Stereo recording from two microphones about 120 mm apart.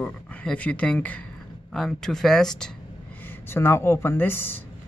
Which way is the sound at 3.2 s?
20° left (ahead or behind).